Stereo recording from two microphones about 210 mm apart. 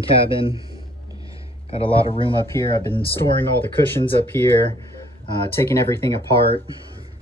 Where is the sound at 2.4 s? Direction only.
15° left (ahead or behind).